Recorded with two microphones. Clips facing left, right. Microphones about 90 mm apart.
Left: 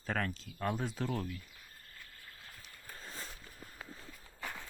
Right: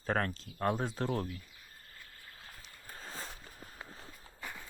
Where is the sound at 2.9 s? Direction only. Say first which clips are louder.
Right 3 dB; 30° right (ahead or behind).